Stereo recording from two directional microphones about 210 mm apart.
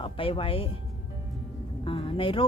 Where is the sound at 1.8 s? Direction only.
25° left (ahead or behind).